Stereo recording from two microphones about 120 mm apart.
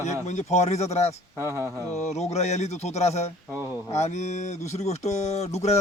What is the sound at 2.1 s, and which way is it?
Speech, 70° left (ahead or behind).